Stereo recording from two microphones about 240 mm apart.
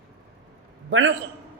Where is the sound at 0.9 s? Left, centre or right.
Right.